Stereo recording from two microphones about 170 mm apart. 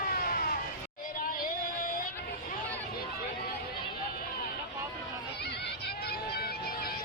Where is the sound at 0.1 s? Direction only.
60° left (ahead or behind).